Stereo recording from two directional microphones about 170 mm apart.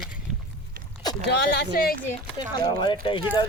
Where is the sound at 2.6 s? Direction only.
25° left (ahead or behind).